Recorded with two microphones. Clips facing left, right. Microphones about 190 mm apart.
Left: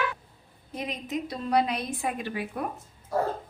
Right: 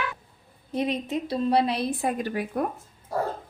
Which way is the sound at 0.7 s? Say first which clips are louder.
Right 6 dB; 30° right (ahead or behind).